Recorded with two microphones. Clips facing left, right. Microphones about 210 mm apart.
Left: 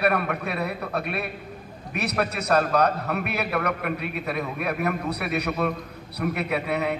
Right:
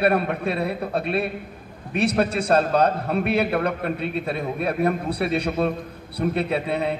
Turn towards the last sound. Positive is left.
turn(degrees=-30)  # may be behind; listen again after turning